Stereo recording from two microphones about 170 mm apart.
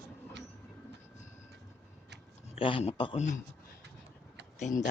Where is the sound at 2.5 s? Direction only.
35° left (ahead or behind).